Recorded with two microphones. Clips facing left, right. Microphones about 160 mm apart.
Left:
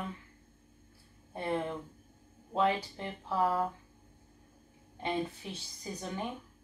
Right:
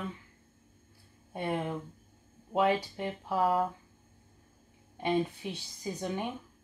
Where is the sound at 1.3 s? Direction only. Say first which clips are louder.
Right 1 dB; 20° right (ahead or behind).